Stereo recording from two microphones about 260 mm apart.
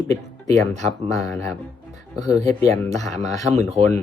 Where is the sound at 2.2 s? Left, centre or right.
Centre.